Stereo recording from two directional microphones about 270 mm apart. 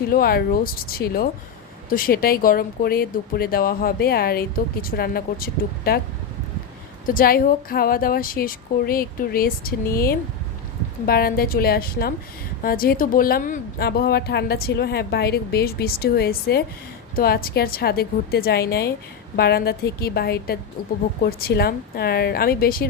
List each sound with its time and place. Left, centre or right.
0.1 s speech: left
7.1 s speech: left